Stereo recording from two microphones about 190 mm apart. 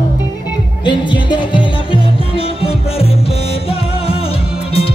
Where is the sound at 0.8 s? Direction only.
25° left (ahead or behind).